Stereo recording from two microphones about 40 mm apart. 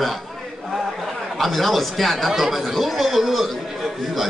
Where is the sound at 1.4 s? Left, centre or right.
Centre.